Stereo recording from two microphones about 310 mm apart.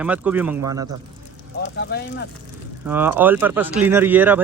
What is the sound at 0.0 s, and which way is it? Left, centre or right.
Speech, centre.